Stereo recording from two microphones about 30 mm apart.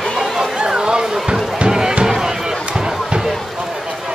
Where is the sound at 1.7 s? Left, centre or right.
Right.